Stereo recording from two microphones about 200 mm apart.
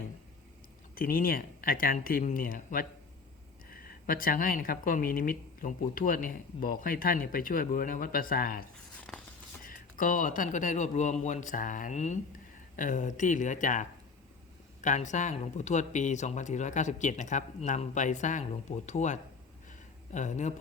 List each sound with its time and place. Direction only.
0.9 s speech: 45° left (ahead or behind)
9.0 s a sound: 5° left (ahead or behind)
9.6 s speech: 40° left (ahead or behind)